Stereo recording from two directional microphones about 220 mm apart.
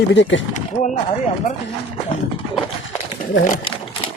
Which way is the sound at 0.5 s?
35° left (ahead or behind).